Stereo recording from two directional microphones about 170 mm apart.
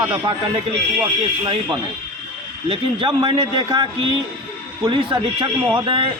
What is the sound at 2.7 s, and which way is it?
A man's voice, 30° right (ahead or behind).